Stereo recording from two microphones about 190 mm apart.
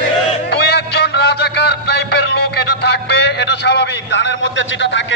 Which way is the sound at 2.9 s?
65° left (ahead or behind).